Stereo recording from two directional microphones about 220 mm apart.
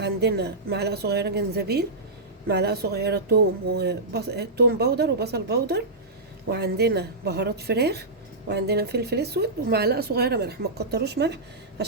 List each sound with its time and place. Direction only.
0.0 s speech: 50° right (ahead or behind)